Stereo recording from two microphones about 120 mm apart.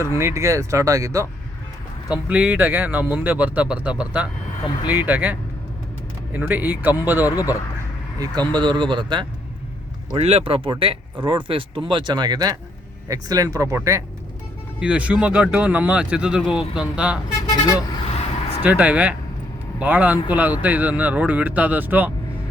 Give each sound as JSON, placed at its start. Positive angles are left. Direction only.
{"t": 0.0, "sound": "speech", "side_deg": -25}
{"t": 2.0, "sound": "speech", "side_deg": -10}
{"t": 7.3, "sound": "speech", "side_deg": 30}
{"t": 8.5, "sound": "a man's voice", "side_deg": -40}
{"t": 10.2, "sound": "a man's voice", "side_deg": -60}
{"t": 14.8, "sound": "speech", "side_deg": -10}
{"t": 18.0, "sound": "a sound", "side_deg": 55}
{"t": 18.6, "sound": "speech", "side_deg": -10}